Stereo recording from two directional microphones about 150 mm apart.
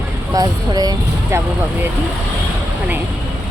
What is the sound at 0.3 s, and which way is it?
Speech, 25° right (ahead or behind).